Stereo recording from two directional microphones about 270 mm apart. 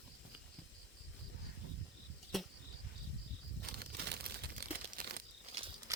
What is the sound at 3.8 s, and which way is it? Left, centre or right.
Crumpling, right.